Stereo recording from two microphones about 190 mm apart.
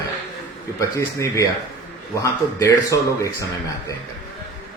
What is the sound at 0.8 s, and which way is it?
Speech, 15° left (ahead or behind).